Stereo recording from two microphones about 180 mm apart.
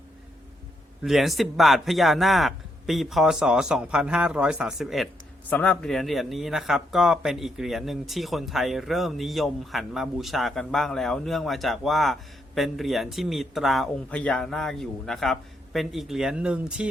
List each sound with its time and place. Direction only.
1.0 s speech: centre (ahead or behind)
5.5 s speech: 10° left (ahead or behind); by 16.9 s 5° right (ahead or behind)